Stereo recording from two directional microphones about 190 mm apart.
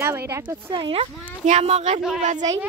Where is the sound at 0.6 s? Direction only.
25° right (ahead or behind).